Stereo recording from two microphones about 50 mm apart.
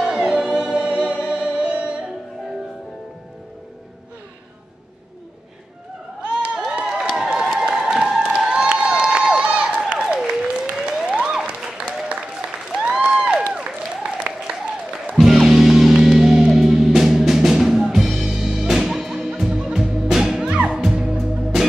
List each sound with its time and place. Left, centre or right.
0.0 s music: centre
6.2 s crowd: right
6.7 s a sound: centre
8.3 s crowd: centre
9.8 s applause: right
10.7 s a sound: centre
11.1 s applause: centre
12.7 s applause: centre
13.5 s music: centre
15.1 s music: centre
20.4 s music: centre